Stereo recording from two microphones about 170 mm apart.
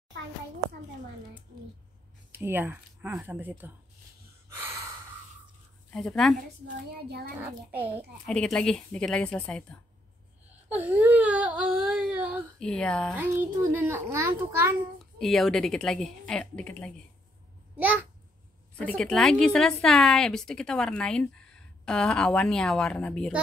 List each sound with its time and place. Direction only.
2.3 s speech: 10° right (ahead or behind)
5.9 s a woman's voice: 5° left (ahead or behind)
6.9 s a child's voice: 70° right (ahead or behind)
7.7 s speech: 10° right (ahead or behind)
8.3 s a woman's voice: 5° left (ahead or behind)
10.7 s speech: 10° right (ahead or behind)
12.5 s a woman's voice: 5° left (ahead or behind)
13.1 s speech: 10° right (ahead or behind)
15.1 s a woman's voice: centre (ahead or behind)
18.8 s a woman's voice: 5° left (ahead or behind)